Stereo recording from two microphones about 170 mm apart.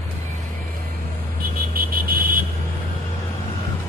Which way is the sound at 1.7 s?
60° right (ahead or behind).